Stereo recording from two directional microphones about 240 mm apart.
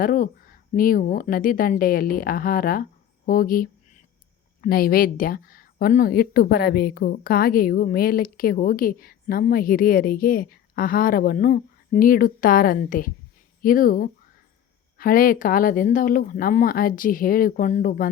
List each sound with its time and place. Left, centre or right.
0.0 s speech: left